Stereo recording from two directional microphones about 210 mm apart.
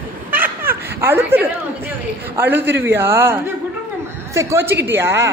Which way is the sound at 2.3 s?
10° right (ahead or behind).